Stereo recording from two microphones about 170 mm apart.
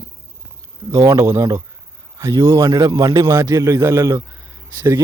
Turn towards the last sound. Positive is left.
turn(degrees=-15)  # may be behind; listen again after turning